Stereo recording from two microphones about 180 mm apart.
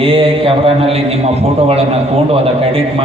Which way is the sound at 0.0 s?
30° right (ahead or behind).